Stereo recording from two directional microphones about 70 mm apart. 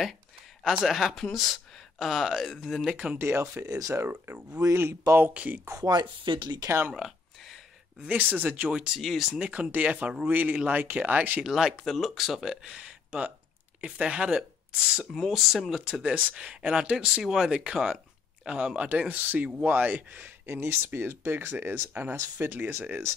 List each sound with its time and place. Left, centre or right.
0.7 s speech: centre
2.9 s speech: centre
3.2 s speech: right
3.9 s speech: right
4.6 s speech: right
5.9 s speech: right
6.9 s a sound: centre
8.0 s speech: right; by 9.5 s centre
9.5 s speech: centre
11.4 s speech: centre
15.1 s speech: centre
15.9 s speech: centre; by 23.1 s right